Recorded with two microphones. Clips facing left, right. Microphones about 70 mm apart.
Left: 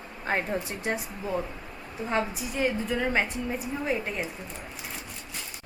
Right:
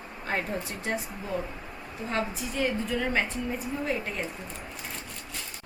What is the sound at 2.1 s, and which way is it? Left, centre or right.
A woman's voice, centre.